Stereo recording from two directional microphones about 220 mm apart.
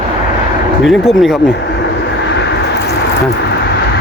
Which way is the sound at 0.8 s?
Centre (ahead or behind).